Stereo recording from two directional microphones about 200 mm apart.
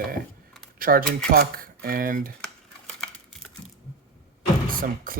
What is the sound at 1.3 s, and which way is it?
Speech, 45° right (ahead or behind).